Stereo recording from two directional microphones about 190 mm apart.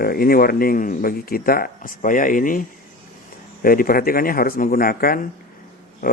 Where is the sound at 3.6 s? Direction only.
50° left (ahead or behind).